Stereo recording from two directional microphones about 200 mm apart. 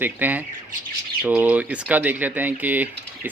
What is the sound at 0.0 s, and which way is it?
Speech, 10° right (ahead or behind).